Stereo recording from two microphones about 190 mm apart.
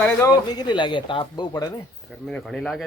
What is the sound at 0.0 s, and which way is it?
Speech, 5° left (ahead or behind).